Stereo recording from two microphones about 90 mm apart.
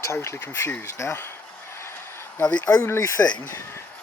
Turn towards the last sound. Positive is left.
turn(degrees=30)  # may be behind; listen again after turning